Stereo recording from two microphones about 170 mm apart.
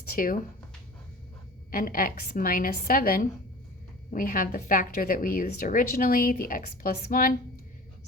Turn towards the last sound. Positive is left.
turn(degrees=60)  # may be behind; listen again after turning